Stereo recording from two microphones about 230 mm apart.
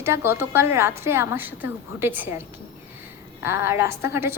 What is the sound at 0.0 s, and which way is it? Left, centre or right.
A woman's voice, centre.